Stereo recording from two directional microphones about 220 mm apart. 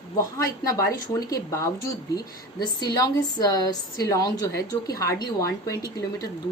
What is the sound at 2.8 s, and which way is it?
A woman's voice, 15° left (ahead or behind).